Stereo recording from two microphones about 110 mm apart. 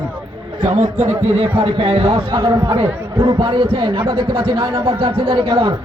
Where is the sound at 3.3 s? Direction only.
50° right (ahead or behind).